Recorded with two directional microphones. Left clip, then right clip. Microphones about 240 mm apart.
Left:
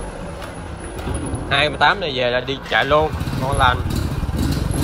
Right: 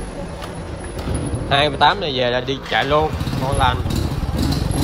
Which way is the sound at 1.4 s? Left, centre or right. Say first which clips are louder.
Right 1 dB; centre.